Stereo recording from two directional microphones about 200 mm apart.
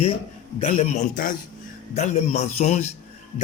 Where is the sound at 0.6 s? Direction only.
35° left (ahead or behind).